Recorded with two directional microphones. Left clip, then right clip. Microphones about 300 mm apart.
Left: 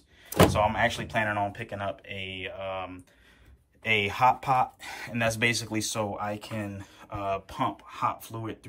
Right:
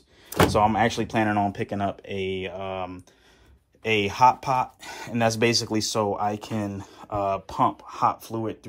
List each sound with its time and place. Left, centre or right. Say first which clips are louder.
0.5 s speech: right 4 dB; centre